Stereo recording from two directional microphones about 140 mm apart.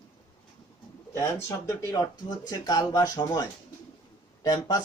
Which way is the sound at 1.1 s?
20° left (ahead or behind).